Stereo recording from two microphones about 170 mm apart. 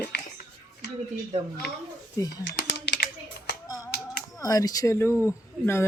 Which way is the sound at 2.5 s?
90° left.